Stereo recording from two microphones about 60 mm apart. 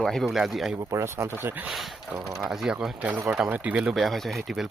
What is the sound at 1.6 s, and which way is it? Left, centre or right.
Speech, centre.